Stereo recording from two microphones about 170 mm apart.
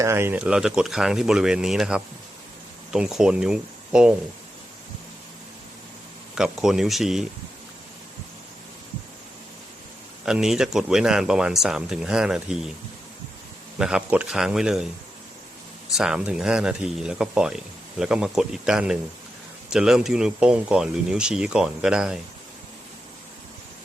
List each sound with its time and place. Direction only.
0.0 s speech: 15° right (ahead or behind)
6.3 s speech: 5° right (ahead or behind)
10.2 s speech: 5° right (ahead or behind)
13.7 s speech: 5° right (ahead or behind)
15.9 s speech: 5° right (ahead or behind)